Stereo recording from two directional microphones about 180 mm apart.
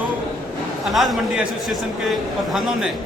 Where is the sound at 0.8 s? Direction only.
Centre (ahead or behind).